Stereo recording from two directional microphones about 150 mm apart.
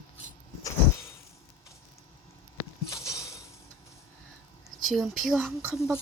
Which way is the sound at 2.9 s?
20° left (ahead or behind).